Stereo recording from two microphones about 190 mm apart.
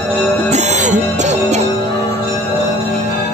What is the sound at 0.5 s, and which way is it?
Music, 35° right (ahead or behind).